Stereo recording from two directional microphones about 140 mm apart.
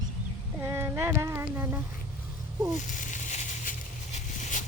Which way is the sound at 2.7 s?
60° left (ahead or behind).